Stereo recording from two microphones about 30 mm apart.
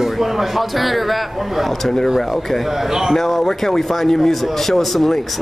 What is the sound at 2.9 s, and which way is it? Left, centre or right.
Speech, centre.